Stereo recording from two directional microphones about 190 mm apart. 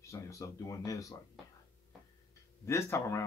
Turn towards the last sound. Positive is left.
turn(degrees=15)  # may be behind; listen again after turning